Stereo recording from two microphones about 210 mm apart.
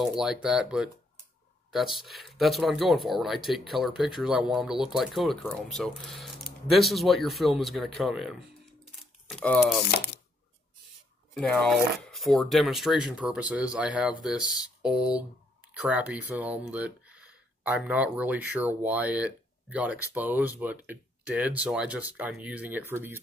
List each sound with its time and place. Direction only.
0.0 s speech: centre (ahead or behind)
9.8 s speech: 45° left (ahead or behind)
11.3 s speech: centre (ahead or behind)